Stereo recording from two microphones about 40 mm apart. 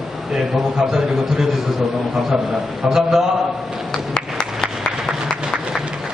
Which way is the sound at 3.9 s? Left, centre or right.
Centre.